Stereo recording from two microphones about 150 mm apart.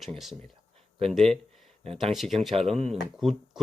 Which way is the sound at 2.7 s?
45° right (ahead or behind).